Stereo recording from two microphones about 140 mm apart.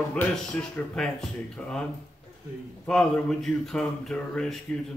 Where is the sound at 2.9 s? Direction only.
5° left (ahead or behind).